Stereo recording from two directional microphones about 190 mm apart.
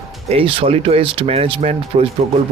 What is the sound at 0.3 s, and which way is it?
Speech, 30° right (ahead or behind).